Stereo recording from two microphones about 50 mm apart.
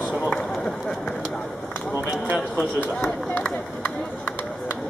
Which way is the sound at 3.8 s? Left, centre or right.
Left.